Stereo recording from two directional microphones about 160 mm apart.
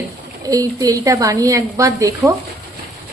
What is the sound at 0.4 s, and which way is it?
Speech, 20° right (ahead or behind).